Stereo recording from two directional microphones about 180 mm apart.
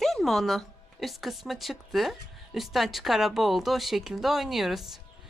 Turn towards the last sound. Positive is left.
turn(degrees=0)  # may be behind; listen again after turning